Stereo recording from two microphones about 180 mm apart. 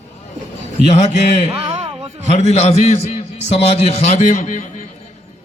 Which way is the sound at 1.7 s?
30° right (ahead or behind).